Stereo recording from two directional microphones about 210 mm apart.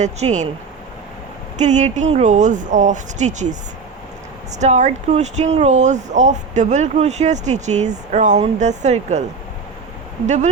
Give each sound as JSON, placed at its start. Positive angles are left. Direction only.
{"t": 0.0, "sound": "speech", "side_deg": -35}
{"t": 1.5, "sound": "speech", "side_deg": -35}
{"t": 4.6, "sound": "speech", "side_deg": -35}
{"t": 10.2, "sound": "speech", "side_deg": -35}